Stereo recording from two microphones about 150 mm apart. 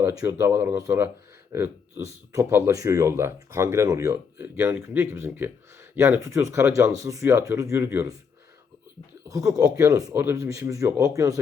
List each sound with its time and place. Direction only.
0.0 s speech: 20° right (ahead or behind)
9.3 s speech: 20° right (ahead or behind)